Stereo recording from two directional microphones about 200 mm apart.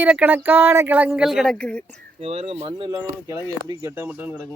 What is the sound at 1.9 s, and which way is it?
Speech, 30° right (ahead or behind).